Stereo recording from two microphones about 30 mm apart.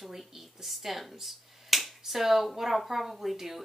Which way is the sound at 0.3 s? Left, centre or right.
Centre.